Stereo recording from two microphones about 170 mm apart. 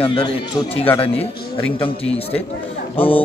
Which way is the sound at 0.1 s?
30° left (ahead or behind).